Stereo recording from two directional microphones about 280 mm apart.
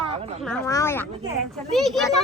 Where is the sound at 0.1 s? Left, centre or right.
Right.